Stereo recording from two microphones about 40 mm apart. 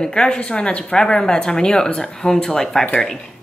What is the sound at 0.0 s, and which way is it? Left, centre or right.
Speech, centre.